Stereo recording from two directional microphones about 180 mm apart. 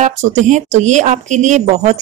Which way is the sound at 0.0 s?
40° right (ahead or behind).